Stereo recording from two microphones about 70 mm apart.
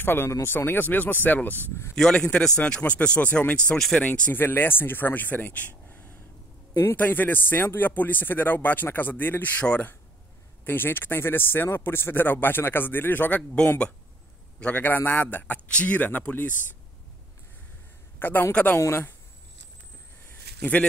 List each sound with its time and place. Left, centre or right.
0.0 s speech: left
2.0 s speech: centre
4.0 s speech: left
10.6 s a man's voice: left
14.6 s speech: left
18.2 s a man's voice: left